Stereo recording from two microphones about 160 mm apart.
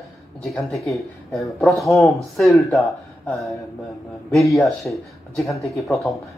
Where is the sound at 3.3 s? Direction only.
Centre (ahead or behind).